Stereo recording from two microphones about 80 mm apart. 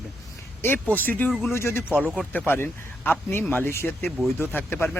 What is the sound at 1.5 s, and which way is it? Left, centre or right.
Speech, left.